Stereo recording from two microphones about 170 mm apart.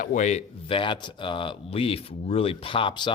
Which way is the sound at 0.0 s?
45° left (ahead or behind).